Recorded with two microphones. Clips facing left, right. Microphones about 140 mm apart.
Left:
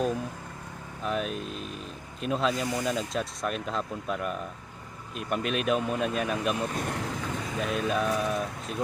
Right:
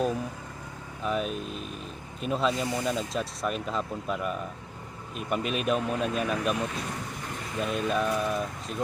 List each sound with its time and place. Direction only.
1.0 s speech: centre (ahead or behind)
6.7 s speech: 65° left (ahead or behind)
7.6 s speech: centre (ahead or behind)